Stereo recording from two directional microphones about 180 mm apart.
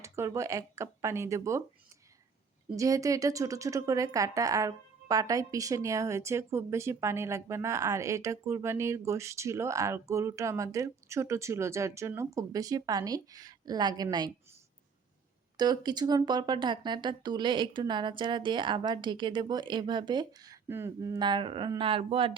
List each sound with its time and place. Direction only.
0.0 s a woman's voice: 15° right (ahead or behind)
2.7 s a woman's voice: 20° right (ahead or behind)
15.5 s speech: 20° right (ahead or behind)